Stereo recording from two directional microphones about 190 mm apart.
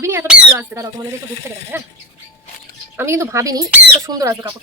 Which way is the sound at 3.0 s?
15° right (ahead or behind).